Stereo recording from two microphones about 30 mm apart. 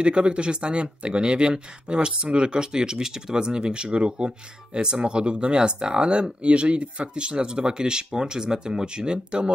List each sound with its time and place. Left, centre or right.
0.0 s speech: right